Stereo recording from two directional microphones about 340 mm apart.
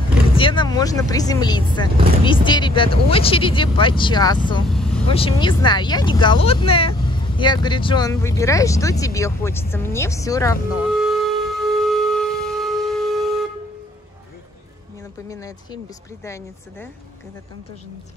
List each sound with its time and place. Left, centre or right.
0.4 s speech: centre
4.6 s vehicle: centre
5.0 s speech: centre
11.0 s wind instrument: centre
15.2 s a sound: centre
16.3 s speech: centre